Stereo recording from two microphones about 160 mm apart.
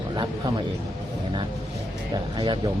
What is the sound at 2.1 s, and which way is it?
Speech, 30° right (ahead or behind).